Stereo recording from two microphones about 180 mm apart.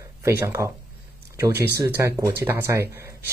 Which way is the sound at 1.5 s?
65° right (ahead or behind).